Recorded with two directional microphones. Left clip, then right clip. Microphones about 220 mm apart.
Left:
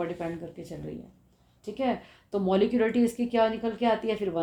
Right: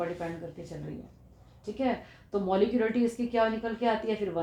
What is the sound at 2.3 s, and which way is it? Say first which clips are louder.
A woman's voice: left 2 dB; 55° left (ahead or behind).